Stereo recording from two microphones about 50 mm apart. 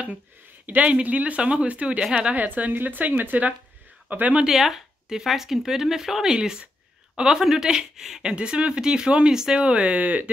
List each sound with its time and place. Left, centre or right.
0.7 s speech: right
4.5 s speech: centre; by 10.3 s right